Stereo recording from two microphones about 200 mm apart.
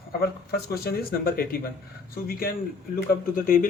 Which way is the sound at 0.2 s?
50° left (ahead or behind).